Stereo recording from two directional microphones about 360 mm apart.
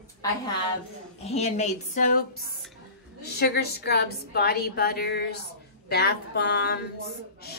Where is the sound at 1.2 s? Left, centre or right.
Centre.